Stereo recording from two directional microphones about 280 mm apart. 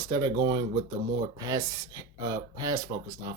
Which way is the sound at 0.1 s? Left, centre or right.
Centre.